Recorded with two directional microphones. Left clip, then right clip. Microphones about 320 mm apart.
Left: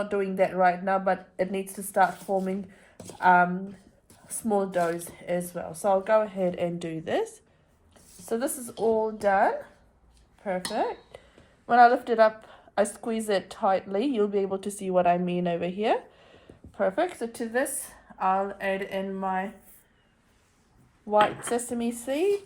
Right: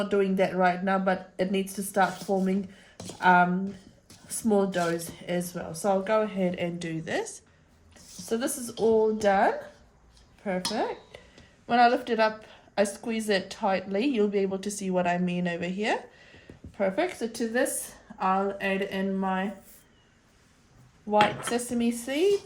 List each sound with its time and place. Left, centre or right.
0.1 s a woman's voice: centre
8.3 s a woman's voice: centre
21.1 s a woman's voice: left
21.5 s a woman's voice: centre